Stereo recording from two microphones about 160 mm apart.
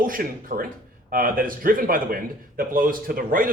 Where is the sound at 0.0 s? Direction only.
60° right (ahead or behind).